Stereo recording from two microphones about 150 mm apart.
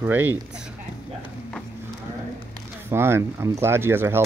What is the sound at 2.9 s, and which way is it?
Speech, 15° right (ahead or behind).